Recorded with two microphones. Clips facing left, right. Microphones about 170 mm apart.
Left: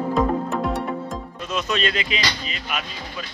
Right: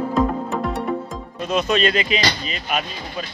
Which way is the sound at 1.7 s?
45° right (ahead or behind).